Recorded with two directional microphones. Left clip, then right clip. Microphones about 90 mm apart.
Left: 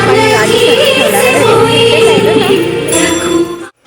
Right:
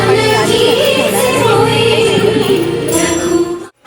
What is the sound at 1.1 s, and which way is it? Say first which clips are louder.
Music: left 4 dB; 35° left (ahead or behind).